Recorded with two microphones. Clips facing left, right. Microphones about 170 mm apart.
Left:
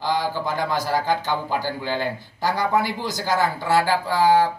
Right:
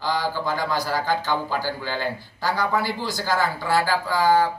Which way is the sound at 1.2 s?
20° left (ahead or behind).